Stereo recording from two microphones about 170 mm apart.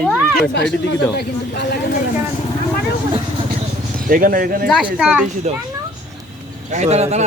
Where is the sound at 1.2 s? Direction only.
70° left (ahead or behind).